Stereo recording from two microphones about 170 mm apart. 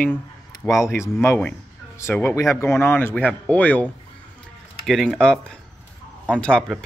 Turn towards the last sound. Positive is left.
turn(degrees=5)  # may be behind; listen again after turning